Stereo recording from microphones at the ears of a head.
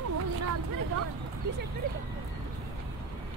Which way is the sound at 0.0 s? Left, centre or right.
Right.